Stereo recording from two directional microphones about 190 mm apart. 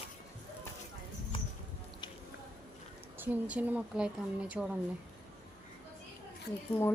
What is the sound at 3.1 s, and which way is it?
A woman's voice, 10° right (ahead or behind).